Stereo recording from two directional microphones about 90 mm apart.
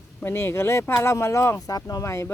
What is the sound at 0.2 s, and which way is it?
Speech, 25° left (ahead or behind).